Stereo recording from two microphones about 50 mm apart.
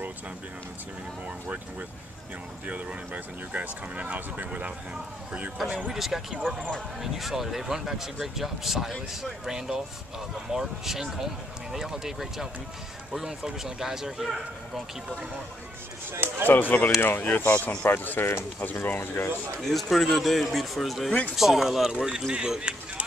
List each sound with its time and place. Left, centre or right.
2.6 s speech: right
5.6 s speech: centre
6.4 s speech: centre
7.0 s speech: centre
16.1 s speech: right
16.4 s speech: left
19.6 s speech: centre